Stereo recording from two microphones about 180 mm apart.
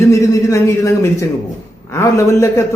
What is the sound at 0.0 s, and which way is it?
A man's voice, 15° left (ahead or behind).